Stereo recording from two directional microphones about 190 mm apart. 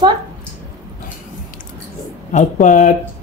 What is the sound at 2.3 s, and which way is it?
Speech, 40° left (ahead or behind).